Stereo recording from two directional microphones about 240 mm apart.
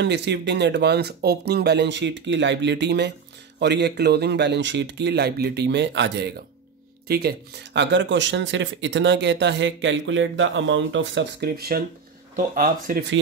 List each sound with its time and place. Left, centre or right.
0.0 s speech: right